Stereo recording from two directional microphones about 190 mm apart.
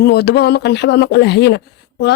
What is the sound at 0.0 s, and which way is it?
Speech, 60° left (ahead or behind).